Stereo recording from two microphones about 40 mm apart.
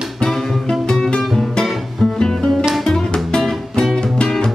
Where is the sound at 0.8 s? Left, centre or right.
Centre.